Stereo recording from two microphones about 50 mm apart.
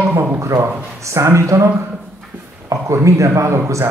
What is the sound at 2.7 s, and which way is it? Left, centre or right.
Speech, right.